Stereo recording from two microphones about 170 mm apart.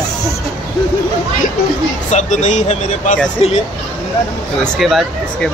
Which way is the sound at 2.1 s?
45° left (ahead or behind).